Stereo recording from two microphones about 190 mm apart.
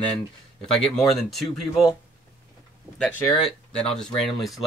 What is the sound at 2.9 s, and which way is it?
Speech, 5° left (ahead or behind).